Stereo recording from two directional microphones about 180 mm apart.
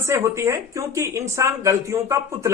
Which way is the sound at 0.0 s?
15° right (ahead or behind).